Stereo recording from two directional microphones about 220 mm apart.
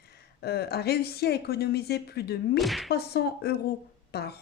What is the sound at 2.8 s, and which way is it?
Speech, 45° left (ahead or behind).